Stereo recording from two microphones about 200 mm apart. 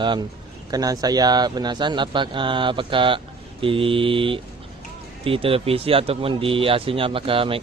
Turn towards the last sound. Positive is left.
turn(degrees=-25)  # may be behind; listen again after turning